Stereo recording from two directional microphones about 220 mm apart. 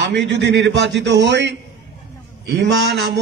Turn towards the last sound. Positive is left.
turn(degrees=-50)  # may be behind; listen again after turning